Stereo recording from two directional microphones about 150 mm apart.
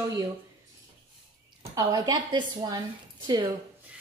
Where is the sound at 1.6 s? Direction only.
25° right (ahead or behind).